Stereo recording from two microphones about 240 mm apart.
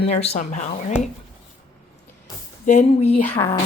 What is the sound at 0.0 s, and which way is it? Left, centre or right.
Speech, left.